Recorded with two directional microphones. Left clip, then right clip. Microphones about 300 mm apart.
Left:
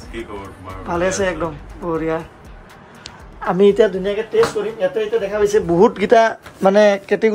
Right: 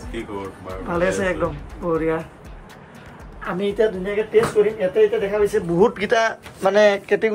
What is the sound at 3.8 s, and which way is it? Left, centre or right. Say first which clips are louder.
Speech: left 5 dB; left.